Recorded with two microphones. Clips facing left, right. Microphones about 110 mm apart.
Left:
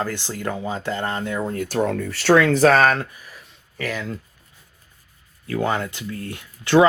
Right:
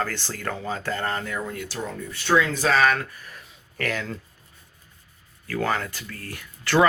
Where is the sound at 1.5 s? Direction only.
50° left (ahead or behind).